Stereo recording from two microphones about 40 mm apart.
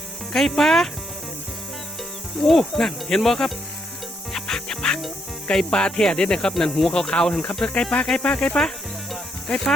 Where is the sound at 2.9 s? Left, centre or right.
Centre.